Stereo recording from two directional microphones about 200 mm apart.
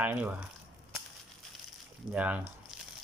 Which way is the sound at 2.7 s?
Centre (ahead or behind).